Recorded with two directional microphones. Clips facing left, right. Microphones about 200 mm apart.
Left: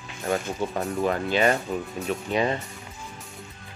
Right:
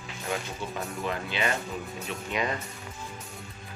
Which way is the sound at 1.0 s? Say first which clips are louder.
Left 9 dB; 45° left (ahead or behind).